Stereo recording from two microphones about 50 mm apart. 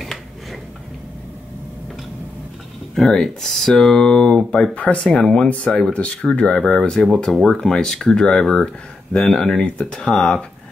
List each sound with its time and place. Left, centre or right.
2.9 s speech: centre; by 10.4 s left